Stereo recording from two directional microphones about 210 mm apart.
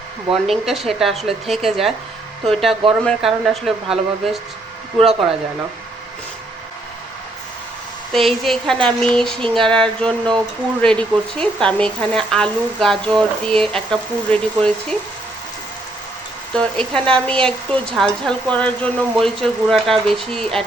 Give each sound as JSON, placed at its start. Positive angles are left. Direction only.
{"t": 0.4, "sound": "speech", "side_deg": 0}
{"t": 8.1, "sound": "speech", "side_deg": 0}
{"t": 16.6, "sound": "speech", "side_deg": 5}